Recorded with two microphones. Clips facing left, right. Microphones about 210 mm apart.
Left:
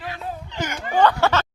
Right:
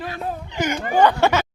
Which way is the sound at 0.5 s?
15° right (ahead or behind).